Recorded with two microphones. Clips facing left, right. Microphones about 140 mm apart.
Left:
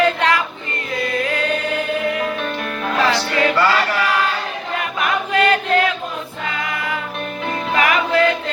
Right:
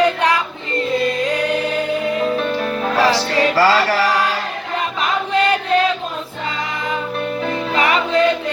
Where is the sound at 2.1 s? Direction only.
25° right (ahead or behind).